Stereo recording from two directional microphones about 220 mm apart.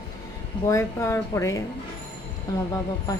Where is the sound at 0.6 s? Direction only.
15° left (ahead or behind).